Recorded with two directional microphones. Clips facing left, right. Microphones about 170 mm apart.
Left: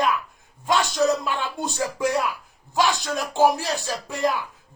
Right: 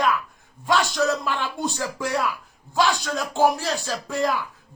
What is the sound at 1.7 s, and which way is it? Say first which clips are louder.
Speech: left 6 dB; 20° left (ahead or behind).